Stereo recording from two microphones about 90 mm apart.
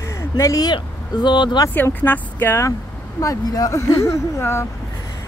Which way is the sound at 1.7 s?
20° left (ahead or behind).